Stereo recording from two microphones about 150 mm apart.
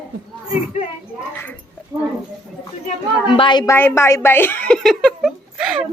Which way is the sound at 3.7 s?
15° left (ahead or behind).